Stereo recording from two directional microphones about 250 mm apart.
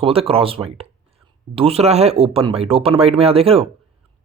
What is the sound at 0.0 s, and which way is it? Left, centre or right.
Speech, right.